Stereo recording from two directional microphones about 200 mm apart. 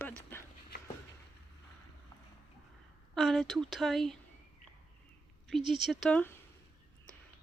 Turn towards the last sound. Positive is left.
turn(degrees=5)  # may be behind; listen again after turning